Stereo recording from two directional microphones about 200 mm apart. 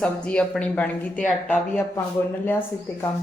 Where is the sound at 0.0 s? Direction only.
5° left (ahead or behind).